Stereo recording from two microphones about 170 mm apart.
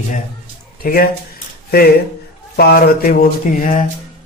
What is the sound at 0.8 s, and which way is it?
Speech, 60° left (ahead or behind).